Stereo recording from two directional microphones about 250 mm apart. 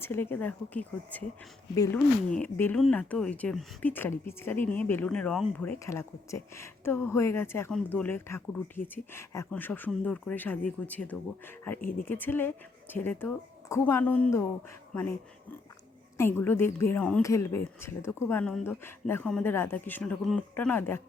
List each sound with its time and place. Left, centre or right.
0.0 s speech: centre
11.8 s speech: left
12.0 s speech: centre